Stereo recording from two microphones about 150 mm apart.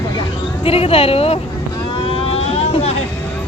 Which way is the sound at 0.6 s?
40° left (ahead or behind).